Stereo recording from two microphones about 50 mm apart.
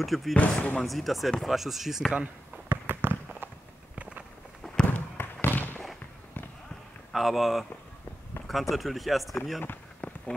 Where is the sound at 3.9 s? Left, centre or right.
Right.